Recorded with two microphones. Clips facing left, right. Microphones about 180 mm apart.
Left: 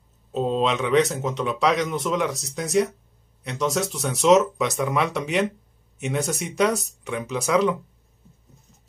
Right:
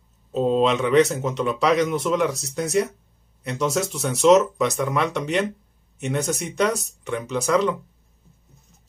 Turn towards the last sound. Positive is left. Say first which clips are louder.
# even
turn(degrees=0)  # may be behind; listen again after turning